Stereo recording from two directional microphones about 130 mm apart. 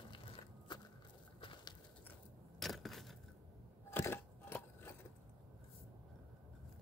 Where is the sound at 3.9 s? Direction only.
15° left (ahead or behind).